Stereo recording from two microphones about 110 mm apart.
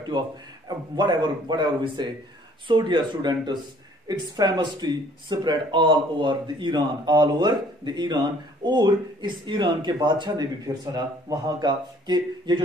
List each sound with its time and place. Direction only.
0.7 s speech: 40° right (ahead or behind)